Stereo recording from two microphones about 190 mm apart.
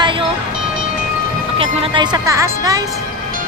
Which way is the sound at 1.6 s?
20° right (ahead or behind).